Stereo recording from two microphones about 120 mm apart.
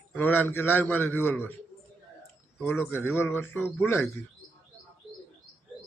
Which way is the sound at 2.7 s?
20° left (ahead or behind).